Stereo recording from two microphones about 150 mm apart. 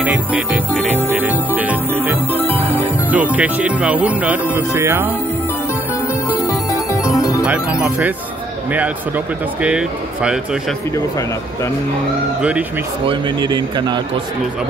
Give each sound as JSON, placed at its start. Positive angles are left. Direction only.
{"t": 0.0, "sound": "speech", "side_deg": -10}
{"t": 2.3, "sound": "music", "side_deg": 15}
{"t": 3.1, "sound": "speech", "side_deg": -10}
{"t": 6.4, "sound": "music", "side_deg": 20}
{"t": 7.4, "sound": "speech", "side_deg": -10}
{"t": 12.4, "sound": "speech", "side_deg": -10}
{"t": 13.0, "sound": "speech", "side_deg": -30}